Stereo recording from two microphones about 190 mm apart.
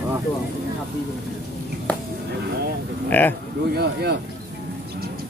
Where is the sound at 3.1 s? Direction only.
10° left (ahead or behind).